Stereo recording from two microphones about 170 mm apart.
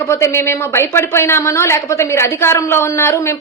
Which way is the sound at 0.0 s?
15° left (ahead or behind).